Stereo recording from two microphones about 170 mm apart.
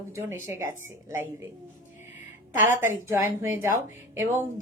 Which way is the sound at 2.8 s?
15° right (ahead or behind).